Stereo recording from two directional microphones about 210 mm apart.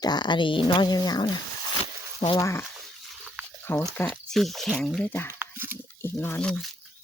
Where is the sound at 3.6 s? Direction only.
10° left (ahead or behind).